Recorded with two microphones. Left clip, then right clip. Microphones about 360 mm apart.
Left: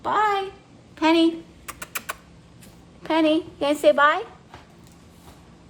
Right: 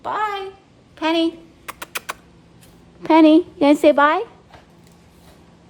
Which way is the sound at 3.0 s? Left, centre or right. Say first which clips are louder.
Right 8 dB; right.